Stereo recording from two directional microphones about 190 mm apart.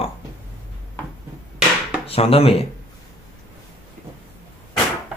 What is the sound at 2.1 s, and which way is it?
Speech, 30° left (ahead or behind).